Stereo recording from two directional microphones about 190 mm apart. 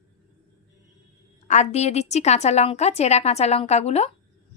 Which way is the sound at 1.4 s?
35° left (ahead or behind).